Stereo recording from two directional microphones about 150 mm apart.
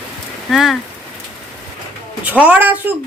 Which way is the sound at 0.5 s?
Centre (ahead or behind).